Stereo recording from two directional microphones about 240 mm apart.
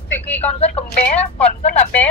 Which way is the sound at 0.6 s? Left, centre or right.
Left.